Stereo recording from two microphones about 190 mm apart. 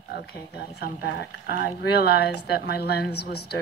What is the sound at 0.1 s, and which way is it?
Speech, 55° left (ahead or behind).